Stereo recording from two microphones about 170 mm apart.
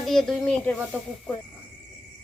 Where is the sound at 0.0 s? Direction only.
Centre (ahead or behind).